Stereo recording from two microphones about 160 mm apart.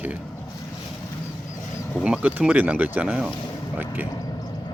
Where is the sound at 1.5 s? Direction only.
20° left (ahead or behind).